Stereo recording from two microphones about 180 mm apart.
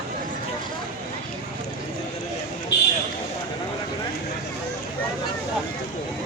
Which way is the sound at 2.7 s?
70° left (ahead or behind).